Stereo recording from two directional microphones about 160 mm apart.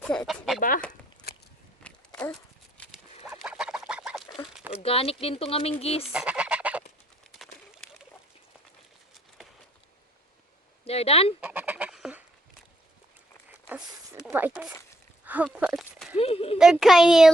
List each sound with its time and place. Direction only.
0.0 s speech: 5° left (ahead or behind)
1.8 s walk: 10° left (ahead or behind)
3.2 s duck: 5° right (ahead or behind)
4.7 s speech: 40° left (ahead or behind)
6.1 s goose: 5° right (ahead or behind)
7.3 s pigeon: centre (ahead or behind)
10.8 s speech: 40° left (ahead or behind)
11.3 s goose: 10° right (ahead or behind)
13.7 s zipper: 10° right (ahead or behind)
15.2 s a sound: 10° right (ahead or behind)
16.1 s speech: 40° left (ahead or behind)
16.8 s speech: centre (ahead or behind)